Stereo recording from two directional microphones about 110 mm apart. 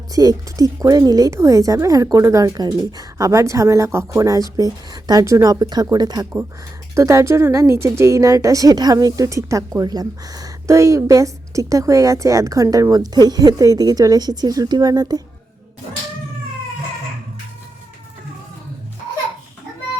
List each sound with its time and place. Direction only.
0.1 s a woman's voice: 35° right (ahead or behind)